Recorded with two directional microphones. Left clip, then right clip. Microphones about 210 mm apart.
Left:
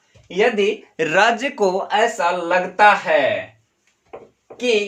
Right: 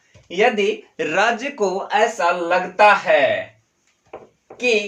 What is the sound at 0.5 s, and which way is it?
Speech, 30° left (ahead or behind).